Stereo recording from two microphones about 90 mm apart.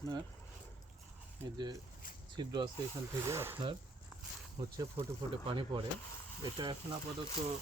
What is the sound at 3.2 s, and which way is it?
Speech, 30° right (ahead or behind).